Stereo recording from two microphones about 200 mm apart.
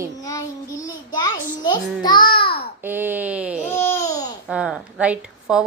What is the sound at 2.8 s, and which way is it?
Speech, 10° right (ahead or behind).